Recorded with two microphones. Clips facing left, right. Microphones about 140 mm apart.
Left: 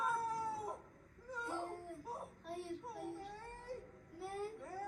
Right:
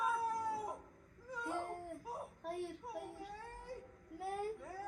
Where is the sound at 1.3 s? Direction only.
Centre (ahead or behind).